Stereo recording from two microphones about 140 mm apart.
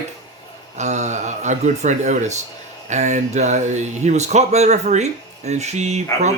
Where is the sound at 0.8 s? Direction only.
55° right (ahead or behind).